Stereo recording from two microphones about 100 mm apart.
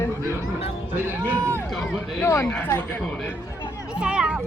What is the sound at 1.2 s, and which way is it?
Speech, 25° right (ahead or behind).